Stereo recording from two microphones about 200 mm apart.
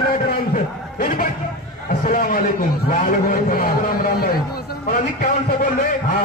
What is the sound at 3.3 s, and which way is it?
A man's voice, 45° left (ahead or behind).